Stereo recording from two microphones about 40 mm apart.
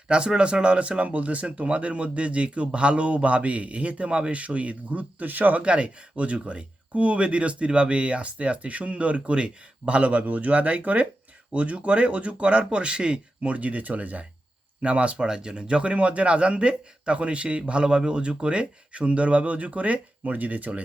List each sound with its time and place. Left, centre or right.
0.1 s speech: right
5.6 s speech: right